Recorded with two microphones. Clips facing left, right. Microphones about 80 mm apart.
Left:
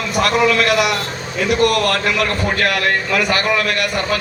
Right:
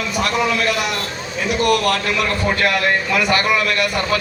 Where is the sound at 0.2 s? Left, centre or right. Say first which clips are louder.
Left 5 dB; left.